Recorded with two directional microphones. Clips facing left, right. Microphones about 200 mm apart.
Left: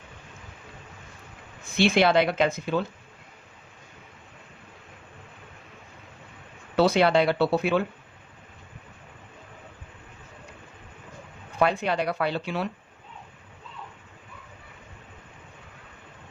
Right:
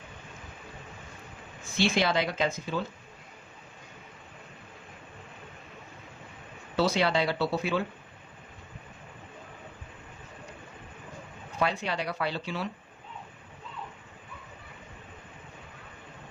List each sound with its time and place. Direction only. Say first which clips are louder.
1.8 s speech: left 6 dB; 65° left (ahead or behind)
6.7 s speech: left 6 dB; 60° left (ahead or behind)
11.6 s speech: left 6 dB; 55° left (ahead or behind)